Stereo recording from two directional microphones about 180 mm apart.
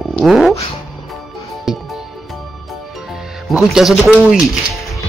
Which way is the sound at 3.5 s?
Centre (ahead or behind).